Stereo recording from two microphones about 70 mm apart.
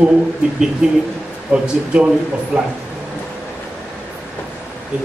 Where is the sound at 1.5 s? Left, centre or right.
Centre.